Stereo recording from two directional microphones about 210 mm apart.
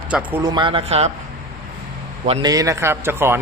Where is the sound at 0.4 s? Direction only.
20° right (ahead or behind).